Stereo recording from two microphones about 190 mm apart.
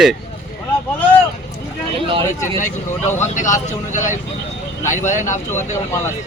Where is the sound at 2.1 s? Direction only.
25° right (ahead or behind).